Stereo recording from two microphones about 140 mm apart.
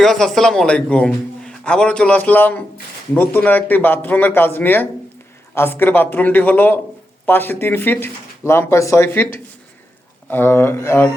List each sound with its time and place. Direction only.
0.0 s a man's voice: centre (ahead or behind)